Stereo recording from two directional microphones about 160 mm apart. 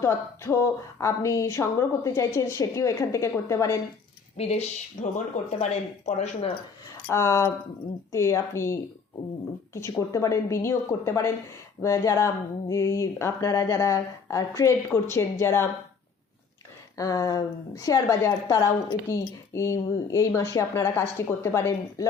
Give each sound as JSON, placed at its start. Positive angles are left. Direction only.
{"t": 0.0, "sound": "a woman's voice", "side_deg": 20}
{"t": 4.4, "sound": "speech", "side_deg": 40}
{"t": 7.1, "sound": "a woman's voice", "side_deg": 15}
{"t": 17.0, "sound": "a woman's voice", "side_deg": 20}